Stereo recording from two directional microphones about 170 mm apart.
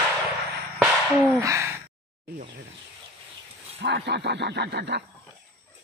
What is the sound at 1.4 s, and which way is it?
Gasp, 20° right (ahead or behind).